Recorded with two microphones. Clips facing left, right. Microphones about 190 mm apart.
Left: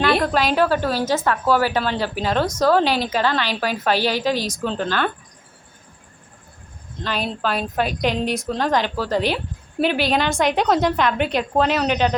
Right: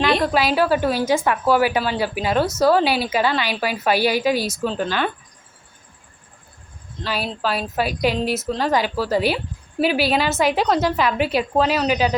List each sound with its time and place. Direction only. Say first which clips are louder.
0.0 s a woman's voice: even; centre (ahead or behind)
7.0 s a woman's voice: even; 5° right (ahead or behind)